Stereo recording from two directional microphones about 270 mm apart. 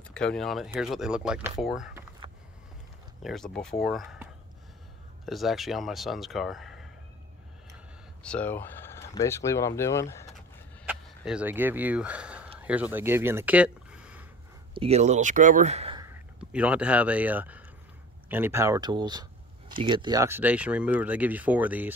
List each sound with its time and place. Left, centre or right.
0.1 s speech: centre
3.2 s speech: centre
8.2 s speech: centre
10.9 s speech: centre
14.7 s speech: right
16.3 s speech: centre